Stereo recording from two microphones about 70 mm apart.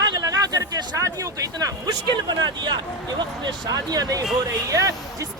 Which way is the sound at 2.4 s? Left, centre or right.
Right.